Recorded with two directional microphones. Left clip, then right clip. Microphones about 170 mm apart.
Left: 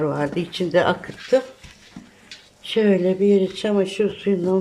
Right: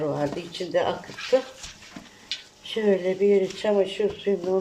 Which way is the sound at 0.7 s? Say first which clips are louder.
Left 6 dB; 80° left.